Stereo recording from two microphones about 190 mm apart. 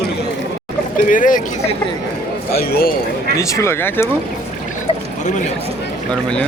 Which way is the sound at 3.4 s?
15° left (ahead or behind).